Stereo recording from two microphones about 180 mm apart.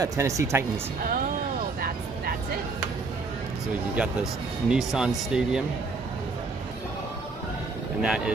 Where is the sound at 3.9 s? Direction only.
5° right (ahead or behind).